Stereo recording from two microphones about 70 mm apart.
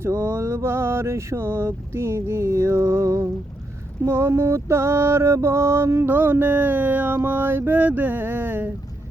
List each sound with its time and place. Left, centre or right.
0.0 s a sound: right
4.0 s music: right
6.1 s music: right